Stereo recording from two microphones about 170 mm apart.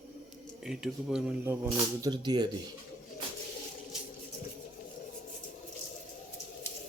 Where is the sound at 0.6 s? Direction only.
5° right (ahead or behind).